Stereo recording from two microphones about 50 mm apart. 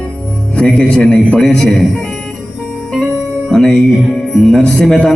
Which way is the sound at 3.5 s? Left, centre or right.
Centre.